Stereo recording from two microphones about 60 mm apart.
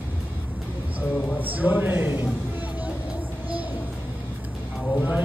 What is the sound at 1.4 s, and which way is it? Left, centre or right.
Speech, right.